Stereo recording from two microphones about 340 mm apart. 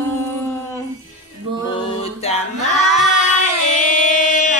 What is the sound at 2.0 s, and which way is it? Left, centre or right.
Music, centre.